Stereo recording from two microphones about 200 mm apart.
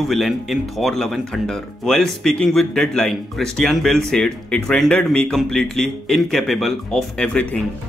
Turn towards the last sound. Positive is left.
turn(degrees=5)  # may be behind; listen again after turning